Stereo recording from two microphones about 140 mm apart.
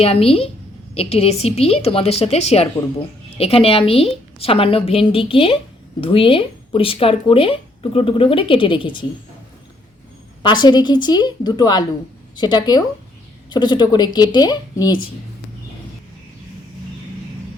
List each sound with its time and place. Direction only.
0.0 s a woman's voice: 45° left (ahead or behind)
10.4 s speech: 30° left (ahead or behind)